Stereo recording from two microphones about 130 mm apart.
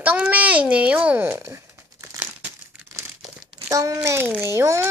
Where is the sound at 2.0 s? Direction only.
20° right (ahead or behind).